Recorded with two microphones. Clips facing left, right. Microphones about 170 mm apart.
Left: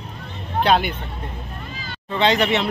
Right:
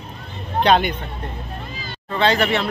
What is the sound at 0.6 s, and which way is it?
Speech, 5° left (ahead or behind).